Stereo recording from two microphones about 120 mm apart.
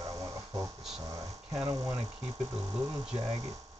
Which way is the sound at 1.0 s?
30° right (ahead or behind).